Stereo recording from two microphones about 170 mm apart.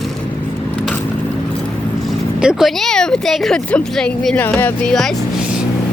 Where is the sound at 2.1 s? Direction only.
5° right (ahead or behind).